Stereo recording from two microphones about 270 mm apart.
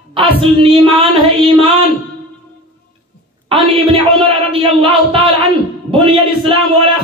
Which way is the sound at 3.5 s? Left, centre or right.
Centre.